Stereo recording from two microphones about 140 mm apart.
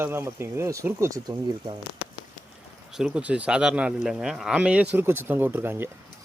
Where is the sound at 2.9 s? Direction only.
5° right (ahead or behind).